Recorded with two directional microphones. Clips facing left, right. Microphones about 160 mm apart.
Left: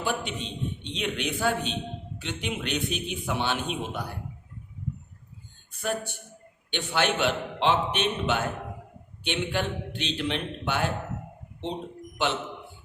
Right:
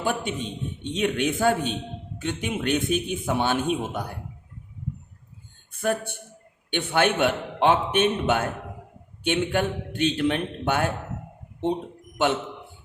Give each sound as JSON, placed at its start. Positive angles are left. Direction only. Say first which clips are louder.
{"t": 0.0, "sound": "a man's voice", "louder": "right 3 dB", "side_deg": -50}
{"t": 5.7, "sound": "a man's voice", "louder": "right 5 dB", "side_deg": -55}
{"t": 12.1, "sound": "a man's voice", "louder": "right 5 dB", "side_deg": -50}